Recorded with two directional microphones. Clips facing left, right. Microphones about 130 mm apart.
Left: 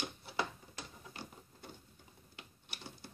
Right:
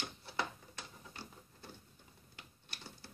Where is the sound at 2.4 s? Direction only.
15° left (ahead or behind).